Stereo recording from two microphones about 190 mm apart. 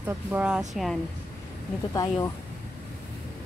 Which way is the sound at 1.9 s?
20° left (ahead or behind).